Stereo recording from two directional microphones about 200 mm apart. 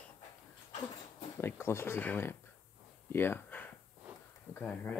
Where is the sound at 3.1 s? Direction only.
10° left (ahead or behind).